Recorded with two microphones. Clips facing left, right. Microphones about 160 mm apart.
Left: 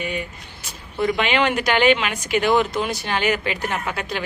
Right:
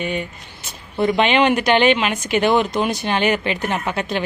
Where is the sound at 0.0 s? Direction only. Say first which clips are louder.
Right 3 dB; 25° right (ahead or behind).